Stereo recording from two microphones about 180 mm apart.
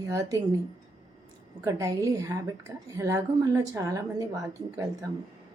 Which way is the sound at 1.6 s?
20° right (ahead or behind).